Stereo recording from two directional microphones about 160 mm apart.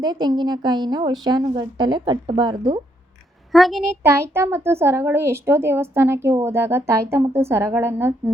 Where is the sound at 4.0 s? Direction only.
15° right (ahead or behind).